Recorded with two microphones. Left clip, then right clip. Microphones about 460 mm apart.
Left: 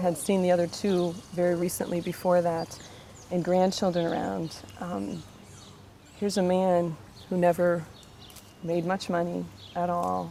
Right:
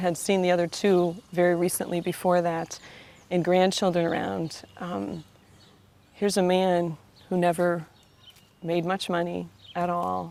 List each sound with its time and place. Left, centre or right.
0.0 s speech: right
6.1 s speech: right